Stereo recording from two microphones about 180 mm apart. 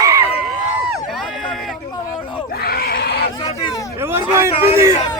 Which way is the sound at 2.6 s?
55° left (ahead or behind).